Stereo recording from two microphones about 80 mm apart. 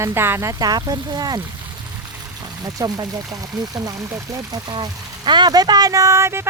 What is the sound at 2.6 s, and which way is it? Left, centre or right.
Speech, right.